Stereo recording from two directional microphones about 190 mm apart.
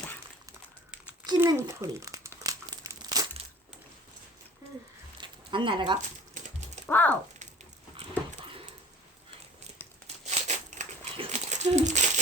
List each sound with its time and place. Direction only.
1.2 s a child's voice: 20° right (ahead or behind)
2.4 s crumpling: 20° right (ahead or behind)
5.2 s a sound: 25° right (ahead or behind)
6.8 s speech: 10° left (ahead or behind)
7.9 s dog: 35° right (ahead or behind)
10.2 s crumpling: 40° right (ahead or behind)